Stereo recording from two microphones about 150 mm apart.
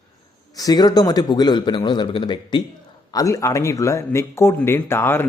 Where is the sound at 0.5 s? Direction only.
25° left (ahead or behind).